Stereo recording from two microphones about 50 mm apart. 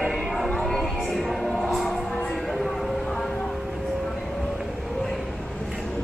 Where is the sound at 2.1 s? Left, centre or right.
Centre.